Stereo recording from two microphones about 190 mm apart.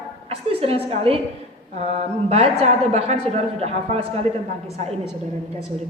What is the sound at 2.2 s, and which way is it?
A woman's voice, 35° right (ahead or behind).